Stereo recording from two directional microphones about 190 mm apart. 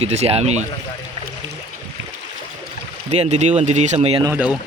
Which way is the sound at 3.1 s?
35° right (ahead or behind).